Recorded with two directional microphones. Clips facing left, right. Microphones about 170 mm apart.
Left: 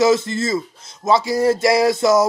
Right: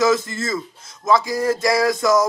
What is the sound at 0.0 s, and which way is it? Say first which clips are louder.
A man's voice: left 3 dB; 25° left (ahead or behind).